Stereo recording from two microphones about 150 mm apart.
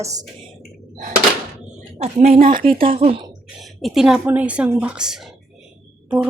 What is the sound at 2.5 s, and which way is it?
Speech, 35° right (ahead or behind).